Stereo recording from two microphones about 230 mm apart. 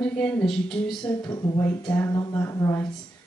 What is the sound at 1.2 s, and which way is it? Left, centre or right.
Speech, centre.